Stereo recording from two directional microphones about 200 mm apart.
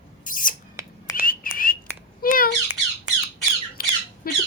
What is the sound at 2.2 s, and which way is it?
Squawk, 45° left (ahead or behind).